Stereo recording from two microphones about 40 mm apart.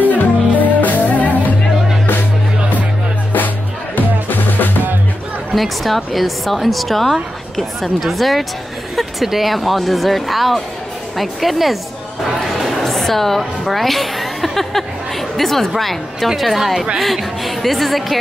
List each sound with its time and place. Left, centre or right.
0.1 s music: left
4.3 s drum: left
5.5 s speech: centre
12.5 s a sound: centre
16.3 s speech: centre